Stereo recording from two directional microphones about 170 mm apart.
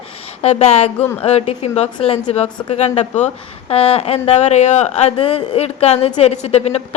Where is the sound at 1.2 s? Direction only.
35° left (ahead or behind).